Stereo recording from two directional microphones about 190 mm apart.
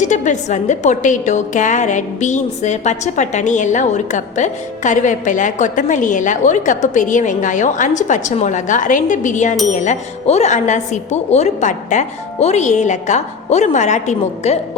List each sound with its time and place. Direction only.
0.0 s a woman's voice: 40° left (ahead or behind)